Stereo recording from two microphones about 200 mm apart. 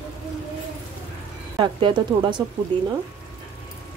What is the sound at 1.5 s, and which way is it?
Speech, 20° right (ahead or behind).